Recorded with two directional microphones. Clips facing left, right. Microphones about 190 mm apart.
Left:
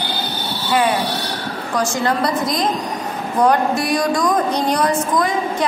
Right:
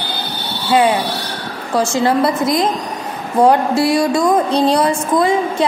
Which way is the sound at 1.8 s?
25° right (ahead or behind).